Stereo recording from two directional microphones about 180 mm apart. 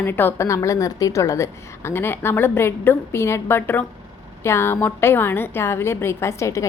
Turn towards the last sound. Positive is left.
turn(degrees=15)  # may be behind; listen again after turning